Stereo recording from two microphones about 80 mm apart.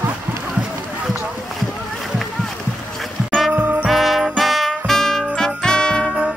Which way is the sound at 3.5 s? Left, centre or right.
Centre.